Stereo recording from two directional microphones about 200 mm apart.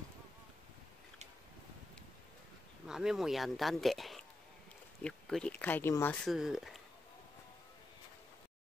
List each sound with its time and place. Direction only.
2.9 s speech: 5° right (ahead or behind)
6.2 s speech: centre (ahead or behind)